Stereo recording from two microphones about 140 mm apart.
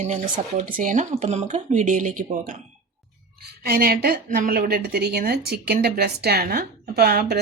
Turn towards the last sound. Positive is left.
turn(degrees=-90)